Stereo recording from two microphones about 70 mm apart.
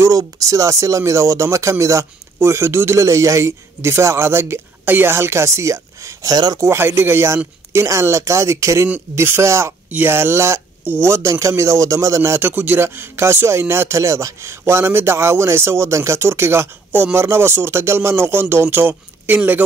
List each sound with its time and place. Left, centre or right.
0.1 s a man's voice: right
6.3 s speech: right
6.6 s a man's voice: right
9.8 s a man's voice: right
10.8 s a sound: right
11.1 s a man's voice: right